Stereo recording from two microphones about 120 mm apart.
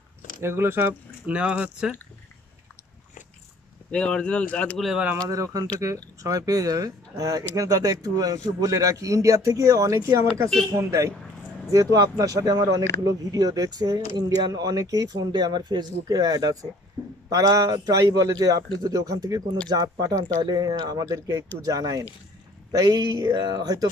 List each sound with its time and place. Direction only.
0.4 s speech: 20° right (ahead or behind)
3.9 s speech: 10° left (ahead or behind)
4.8 s speech: 5° right (ahead or behind)
5.3 s speech: 30° right (ahead or behind)